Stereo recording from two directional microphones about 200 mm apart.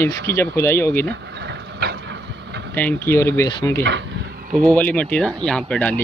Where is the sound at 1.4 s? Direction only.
55° right (ahead or behind).